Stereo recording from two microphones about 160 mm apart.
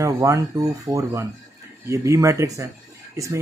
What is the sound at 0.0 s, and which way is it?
Speech, 20° right (ahead or behind).